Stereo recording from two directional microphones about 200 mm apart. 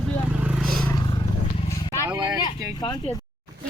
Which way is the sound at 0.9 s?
20° left (ahead or behind).